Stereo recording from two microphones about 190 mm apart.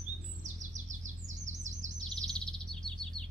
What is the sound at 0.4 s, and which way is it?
Chirp, 40° right (ahead or behind).